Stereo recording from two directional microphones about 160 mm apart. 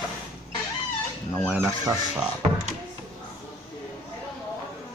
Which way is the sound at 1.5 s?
15° right (ahead or behind).